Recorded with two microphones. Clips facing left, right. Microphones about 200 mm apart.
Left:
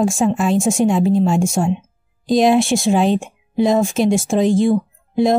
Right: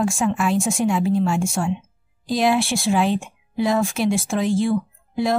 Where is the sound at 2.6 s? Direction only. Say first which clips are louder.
Left 6 dB; 45° left (ahead or behind).